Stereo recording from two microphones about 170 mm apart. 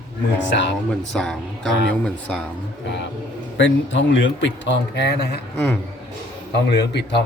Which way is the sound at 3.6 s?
90° left.